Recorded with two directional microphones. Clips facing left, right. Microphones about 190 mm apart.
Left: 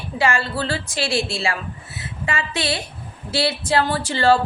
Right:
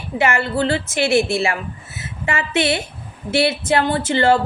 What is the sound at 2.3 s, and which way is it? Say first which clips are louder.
A woman's voice: right 5 dB; 25° right (ahead or behind).